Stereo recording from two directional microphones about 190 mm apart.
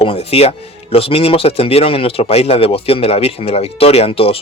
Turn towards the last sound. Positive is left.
turn(degrees=30)  # may be behind; listen again after turning